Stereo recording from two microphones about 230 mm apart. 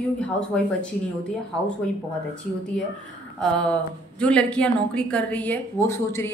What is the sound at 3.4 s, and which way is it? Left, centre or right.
Speech, centre.